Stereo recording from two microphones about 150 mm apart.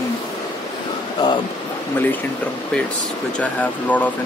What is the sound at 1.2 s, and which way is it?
Speech, 25° left (ahead or behind).